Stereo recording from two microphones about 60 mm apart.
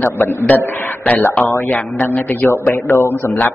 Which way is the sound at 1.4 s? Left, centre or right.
Left.